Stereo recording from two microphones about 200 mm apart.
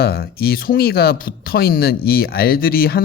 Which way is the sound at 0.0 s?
50° left (ahead or behind).